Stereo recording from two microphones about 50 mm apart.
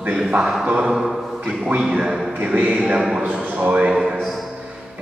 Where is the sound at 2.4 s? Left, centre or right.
Right; by 3.3 s centre.